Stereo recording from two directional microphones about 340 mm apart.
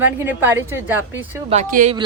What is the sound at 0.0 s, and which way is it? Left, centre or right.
Speech, centre.